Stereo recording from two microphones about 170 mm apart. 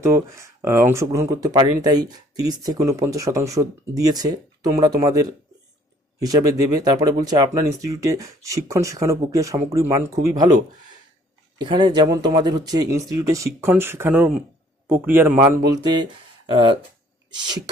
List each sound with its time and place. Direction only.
0.0 s speech: 15° right (ahead or behind)